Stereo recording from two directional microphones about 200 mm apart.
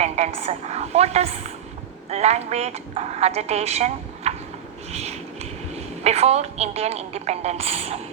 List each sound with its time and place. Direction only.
0.0 s a woman's voice: 30° right (ahead or behind)
4.9 s a sound: 30° right (ahead or behind)
5.7 s a woman's voice: 30° right (ahead or behind)